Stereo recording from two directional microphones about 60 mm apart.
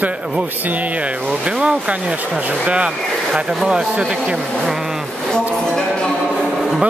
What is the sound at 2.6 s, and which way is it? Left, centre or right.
Speech, centre.